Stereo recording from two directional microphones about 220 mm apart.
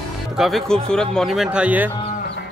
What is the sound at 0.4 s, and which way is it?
Speech, centre (ahead or behind).